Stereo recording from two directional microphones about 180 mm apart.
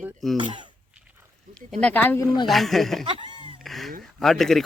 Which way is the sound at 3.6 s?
Centre (ahead or behind).